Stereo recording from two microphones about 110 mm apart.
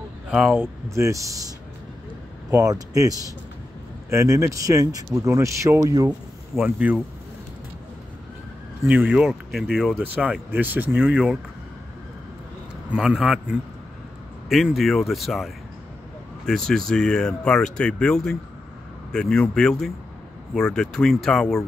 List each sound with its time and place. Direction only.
0.3 s speech: 15° right (ahead or behind)
0.8 s speech: 25° right (ahead or behind)
2.5 s speech: 30° right (ahead or behind)
6.6 s speech: 15° right (ahead or behind)
8.8 s speech: 15° right (ahead or behind)
12.9 s speech: 5° right (ahead or behind)